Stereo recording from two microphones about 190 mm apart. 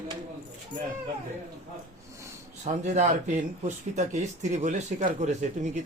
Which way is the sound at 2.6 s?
35° right (ahead or behind).